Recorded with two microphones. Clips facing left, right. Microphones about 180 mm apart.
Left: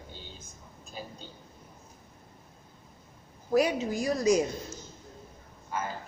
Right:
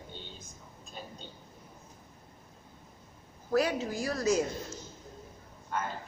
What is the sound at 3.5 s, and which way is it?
Speech, 15° left (ahead or behind).